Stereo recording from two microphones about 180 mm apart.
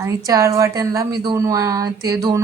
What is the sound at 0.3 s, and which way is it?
Speech, 20° right (ahead or behind).